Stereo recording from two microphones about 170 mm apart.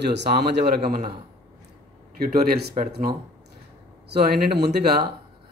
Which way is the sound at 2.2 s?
70° right (ahead or behind).